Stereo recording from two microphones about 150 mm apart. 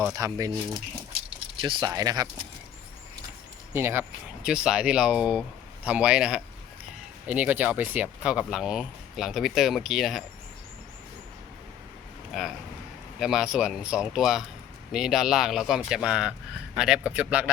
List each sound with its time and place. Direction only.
0.1 s speech: 20° right (ahead or behind)
3.7 s speech: 15° right (ahead or behind)
4.4 s speech: 5° right (ahead or behind)
12.3 s a man's voice: centre (ahead or behind)